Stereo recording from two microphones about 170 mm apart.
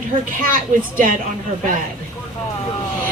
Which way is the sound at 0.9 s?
50° right (ahead or behind).